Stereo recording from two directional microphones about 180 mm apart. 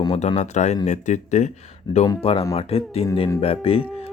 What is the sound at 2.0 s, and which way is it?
Speech, 30° left (ahead or behind).